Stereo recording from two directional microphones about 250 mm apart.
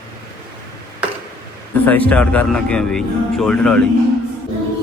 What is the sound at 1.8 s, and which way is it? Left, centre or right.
A man's voice, centre.